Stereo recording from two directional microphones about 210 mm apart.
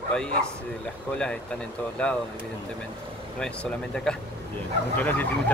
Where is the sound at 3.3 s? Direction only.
5° left (ahead or behind).